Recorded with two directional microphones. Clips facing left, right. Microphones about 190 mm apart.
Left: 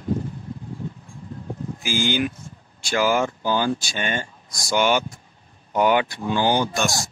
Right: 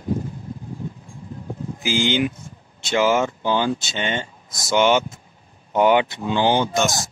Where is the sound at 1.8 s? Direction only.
20° right (ahead or behind).